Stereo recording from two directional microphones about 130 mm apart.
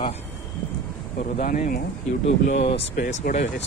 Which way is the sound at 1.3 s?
90° left.